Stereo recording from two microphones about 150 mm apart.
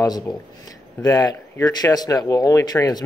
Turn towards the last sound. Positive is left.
turn(degrees=25)  # may be behind; listen again after turning